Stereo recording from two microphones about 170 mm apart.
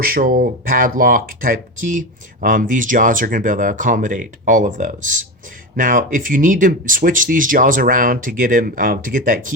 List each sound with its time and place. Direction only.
0.0 s speech: 60° right (ahead or behind)